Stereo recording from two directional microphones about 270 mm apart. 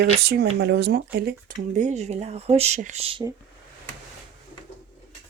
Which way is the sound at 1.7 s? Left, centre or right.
Right.